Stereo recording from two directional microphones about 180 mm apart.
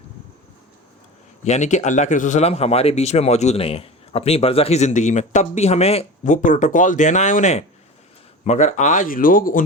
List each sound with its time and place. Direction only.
1.5 s speech: 40° left (ahead or behind)